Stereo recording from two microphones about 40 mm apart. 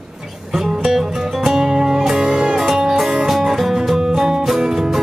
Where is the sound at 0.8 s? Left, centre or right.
Centre.